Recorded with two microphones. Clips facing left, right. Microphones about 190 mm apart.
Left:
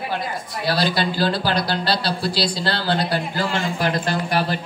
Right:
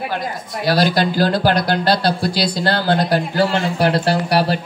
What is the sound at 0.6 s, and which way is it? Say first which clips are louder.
Speech: right 5 dB; 45° right (ahead or behind).